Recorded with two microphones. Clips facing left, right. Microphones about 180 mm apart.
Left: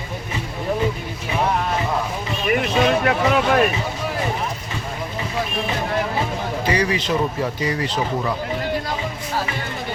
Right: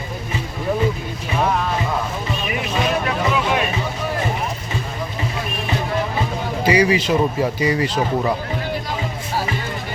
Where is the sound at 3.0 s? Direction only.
60° left (ahead or behind).